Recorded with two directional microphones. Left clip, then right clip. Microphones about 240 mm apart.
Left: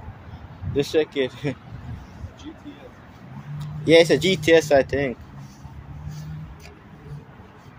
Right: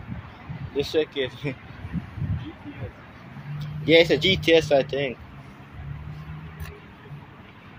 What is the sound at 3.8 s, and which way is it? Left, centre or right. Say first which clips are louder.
Speech: left 2 dB; centre.